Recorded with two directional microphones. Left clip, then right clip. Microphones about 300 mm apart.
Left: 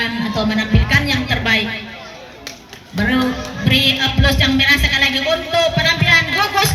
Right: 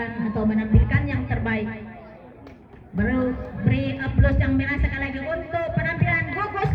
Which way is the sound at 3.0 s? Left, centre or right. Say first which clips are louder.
Left 7 dB; left.